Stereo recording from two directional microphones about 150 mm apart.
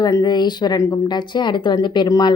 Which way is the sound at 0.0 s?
25° left (ahead or behind).